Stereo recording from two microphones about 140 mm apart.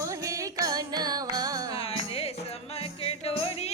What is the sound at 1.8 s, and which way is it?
Music, 45° left (ahead or behind).